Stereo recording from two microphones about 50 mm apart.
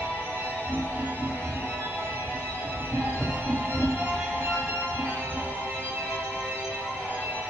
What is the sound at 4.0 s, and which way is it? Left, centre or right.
Music, right.